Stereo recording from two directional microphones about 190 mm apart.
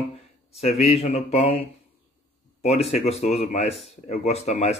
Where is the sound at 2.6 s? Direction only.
35° left (ahead or behind).